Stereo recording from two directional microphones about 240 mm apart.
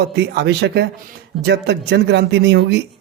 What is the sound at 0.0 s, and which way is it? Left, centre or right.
A man's voice, right.